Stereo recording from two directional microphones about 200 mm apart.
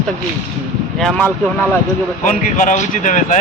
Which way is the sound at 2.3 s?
40° left (ahead or behind).